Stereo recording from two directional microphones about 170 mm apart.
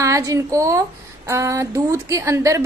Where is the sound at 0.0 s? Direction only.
20° right (ahead or behind).